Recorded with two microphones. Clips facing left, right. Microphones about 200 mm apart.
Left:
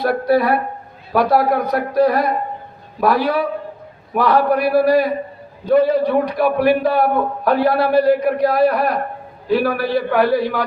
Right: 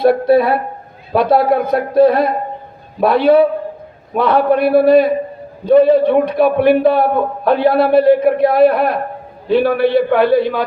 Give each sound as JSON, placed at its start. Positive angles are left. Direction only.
{"t": 0.0, "sound": "a man's voice", "side_deg": -25}